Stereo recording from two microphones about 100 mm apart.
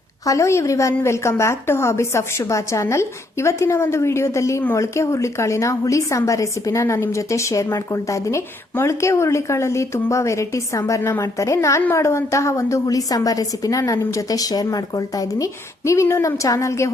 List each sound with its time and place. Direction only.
0.3 s a woman's voice: 30° left (ahead or behind)